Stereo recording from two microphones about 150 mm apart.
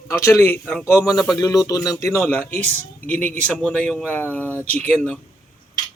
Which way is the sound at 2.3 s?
10° left (ahead or behind).